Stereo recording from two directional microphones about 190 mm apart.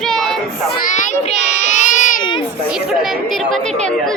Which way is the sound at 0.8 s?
40° left (ahead or behind).